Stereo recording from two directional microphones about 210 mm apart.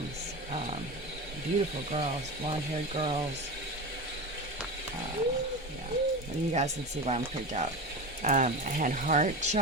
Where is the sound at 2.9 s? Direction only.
30° right (ahead or behind).